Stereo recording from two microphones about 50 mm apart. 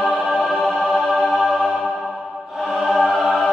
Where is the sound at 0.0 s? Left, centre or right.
Centre.